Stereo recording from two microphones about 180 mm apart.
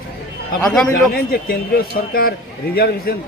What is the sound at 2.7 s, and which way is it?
Speech, 60° left (ahead or behind).